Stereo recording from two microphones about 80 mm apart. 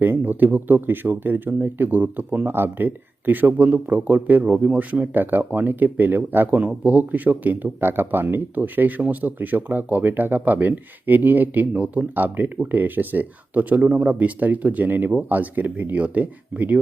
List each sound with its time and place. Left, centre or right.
0.0 s speech: right